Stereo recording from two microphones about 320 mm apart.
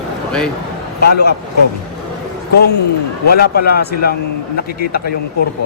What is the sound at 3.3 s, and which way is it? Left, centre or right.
A man's voice, left.